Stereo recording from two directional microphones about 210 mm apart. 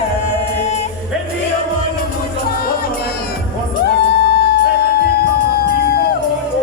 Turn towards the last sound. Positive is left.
turn(degrees=50)  # may be behind; listen again after turning